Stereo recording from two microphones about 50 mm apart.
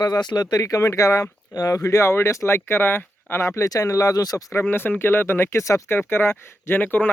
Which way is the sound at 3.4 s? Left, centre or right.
Left.